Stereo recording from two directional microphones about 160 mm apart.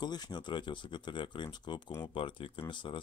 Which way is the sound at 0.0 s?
25° left (ahead or behind).